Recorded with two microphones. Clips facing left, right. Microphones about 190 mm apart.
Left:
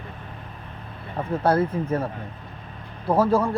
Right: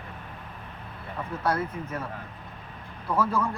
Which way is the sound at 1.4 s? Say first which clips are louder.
Left 7 dB; 30° left (ahead or behind).